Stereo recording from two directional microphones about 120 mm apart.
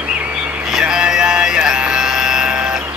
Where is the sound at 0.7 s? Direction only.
5° right (ahead or behind).